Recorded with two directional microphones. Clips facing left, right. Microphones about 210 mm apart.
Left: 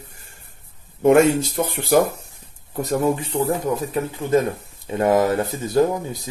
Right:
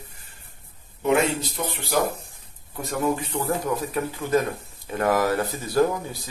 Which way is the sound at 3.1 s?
25° left (ahead or behind).